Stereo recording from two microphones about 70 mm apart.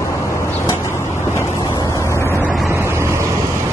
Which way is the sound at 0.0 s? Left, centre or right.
Left.